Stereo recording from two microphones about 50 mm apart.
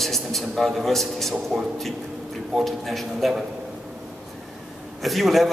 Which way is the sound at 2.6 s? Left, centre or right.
Centre.